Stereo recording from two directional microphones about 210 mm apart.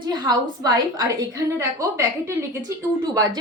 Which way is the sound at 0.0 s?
20° right (ahead or behind).